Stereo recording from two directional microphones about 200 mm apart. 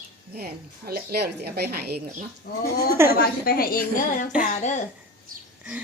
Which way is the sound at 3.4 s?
50° left (ahead or behind).